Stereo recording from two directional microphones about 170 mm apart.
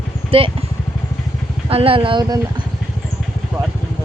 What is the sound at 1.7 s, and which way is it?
Speech, 35° right (ahead or behind).